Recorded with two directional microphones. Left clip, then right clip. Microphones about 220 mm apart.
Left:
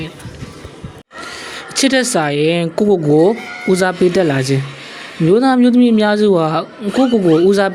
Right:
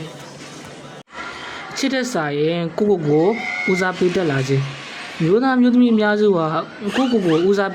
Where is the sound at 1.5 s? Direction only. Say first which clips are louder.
Left 8 dB; 25° left (ahead or behind).